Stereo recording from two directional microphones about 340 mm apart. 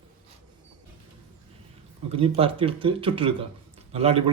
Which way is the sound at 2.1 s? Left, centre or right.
Centre.